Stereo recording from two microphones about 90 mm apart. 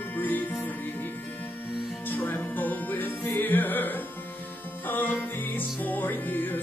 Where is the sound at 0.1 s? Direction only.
20° left (ahead or behind).